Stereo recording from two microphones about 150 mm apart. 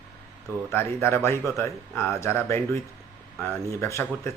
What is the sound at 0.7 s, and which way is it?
Speech, 15° left (ahead or behind).